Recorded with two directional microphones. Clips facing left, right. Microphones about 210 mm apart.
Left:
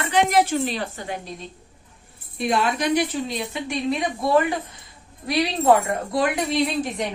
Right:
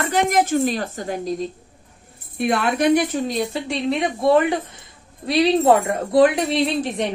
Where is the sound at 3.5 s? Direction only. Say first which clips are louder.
Right 2 dB; 25° right (ahead or behind).